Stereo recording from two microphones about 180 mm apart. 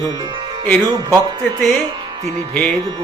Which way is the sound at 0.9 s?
25° right (ahead or behind).